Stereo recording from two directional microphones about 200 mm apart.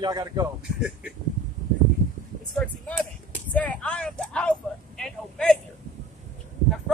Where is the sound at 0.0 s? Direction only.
20° right (ahead or behind).